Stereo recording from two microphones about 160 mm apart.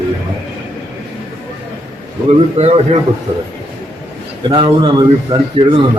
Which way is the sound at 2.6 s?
40° right (ahead or behind).